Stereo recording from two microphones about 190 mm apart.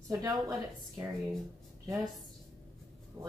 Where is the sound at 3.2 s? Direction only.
10° right (ahead or behind).